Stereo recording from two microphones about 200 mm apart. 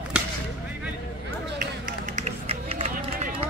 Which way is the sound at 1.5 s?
40° right (ahead or behind).